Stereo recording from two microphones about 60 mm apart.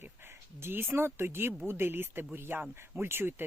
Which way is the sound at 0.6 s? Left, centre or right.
Right.